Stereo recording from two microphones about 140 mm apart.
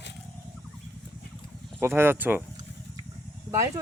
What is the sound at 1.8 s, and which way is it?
Speech, 15° right (ahead or behind).